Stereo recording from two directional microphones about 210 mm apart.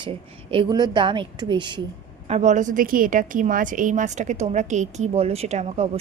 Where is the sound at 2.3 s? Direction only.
35° right (ahead or behind).